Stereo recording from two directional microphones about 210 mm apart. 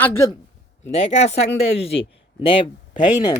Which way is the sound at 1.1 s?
30° left (ahead or behind).